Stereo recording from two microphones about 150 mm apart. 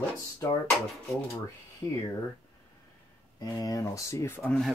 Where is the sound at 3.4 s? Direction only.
25° left (ahead or behind).